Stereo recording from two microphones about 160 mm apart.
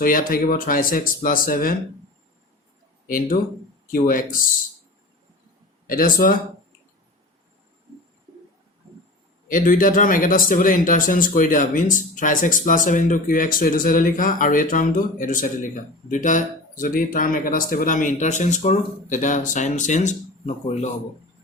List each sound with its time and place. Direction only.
0.0 s speech: 60° left (ahead or behind)
3.1 s speech: 60° left (ahead or behind)
5.9 s speech: 60° left (ahead or behind)
9.5 s speech: 55° left (ahead or behind)